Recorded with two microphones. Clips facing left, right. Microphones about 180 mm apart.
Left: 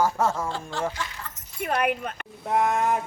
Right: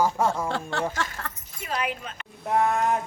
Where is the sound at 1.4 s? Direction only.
55° left (ahead or behind).